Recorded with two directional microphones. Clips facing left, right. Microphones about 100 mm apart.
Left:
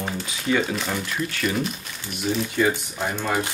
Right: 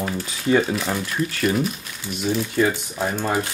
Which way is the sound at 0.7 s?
5° right (ahead or behind).